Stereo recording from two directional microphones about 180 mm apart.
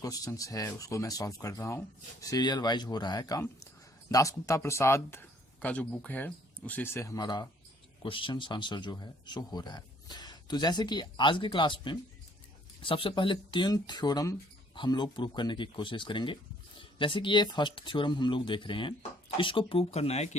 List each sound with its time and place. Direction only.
0.0 s speech: 20° left (ahead or behind); by 20.3 s 35° left (ahead or behind)